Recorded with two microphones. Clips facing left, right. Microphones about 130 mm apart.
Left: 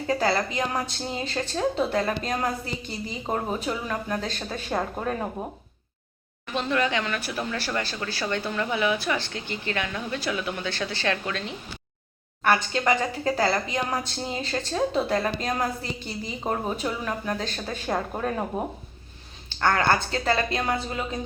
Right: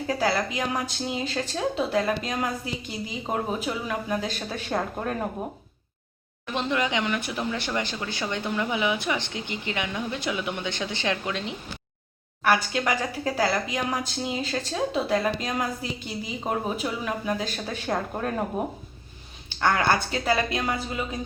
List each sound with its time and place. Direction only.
0.1 s speech: 5° right (ahead or behind)
6.5 s speech: 15° right (ahead or behind)
17.8 s speech: 5° left (ahead or behind)
19.5 s speech: 10° right (ahead or behind)